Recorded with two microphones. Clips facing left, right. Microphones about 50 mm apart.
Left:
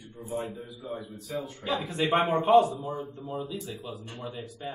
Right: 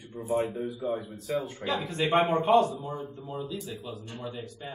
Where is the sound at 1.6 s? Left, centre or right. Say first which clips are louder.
Left 4 dB; centre.